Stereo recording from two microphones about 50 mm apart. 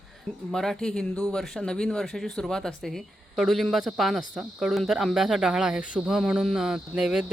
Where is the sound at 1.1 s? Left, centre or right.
Left.